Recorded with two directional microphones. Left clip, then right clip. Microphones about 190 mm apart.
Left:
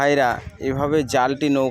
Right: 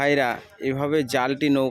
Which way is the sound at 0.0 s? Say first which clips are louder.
Left 3 dB; centre (ahead or behind).